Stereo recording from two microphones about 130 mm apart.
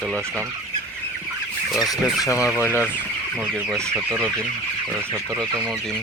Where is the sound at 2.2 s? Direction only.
25° left (ahead or behind).